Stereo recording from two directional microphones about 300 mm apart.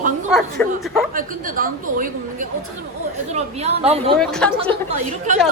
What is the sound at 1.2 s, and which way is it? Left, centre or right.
Speech, right.